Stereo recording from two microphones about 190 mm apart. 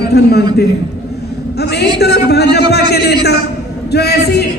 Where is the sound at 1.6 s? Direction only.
60° left (ahead or behind).